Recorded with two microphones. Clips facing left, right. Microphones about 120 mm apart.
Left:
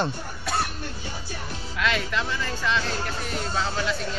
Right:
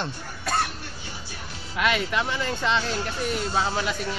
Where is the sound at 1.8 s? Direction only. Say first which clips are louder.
Right 2 dB; 15° right (ahead or behind).